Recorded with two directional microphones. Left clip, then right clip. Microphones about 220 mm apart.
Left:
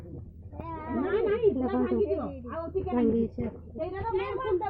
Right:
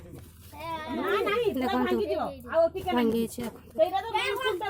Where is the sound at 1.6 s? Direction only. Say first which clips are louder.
Right 1 dB; 35° right (ahead or behind).